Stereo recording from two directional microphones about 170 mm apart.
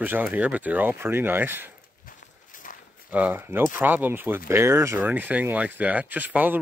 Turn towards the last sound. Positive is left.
turn(degrees=-10)  # may be behind; listen again after turning